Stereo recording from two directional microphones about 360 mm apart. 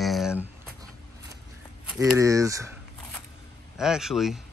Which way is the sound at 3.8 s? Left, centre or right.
Centre.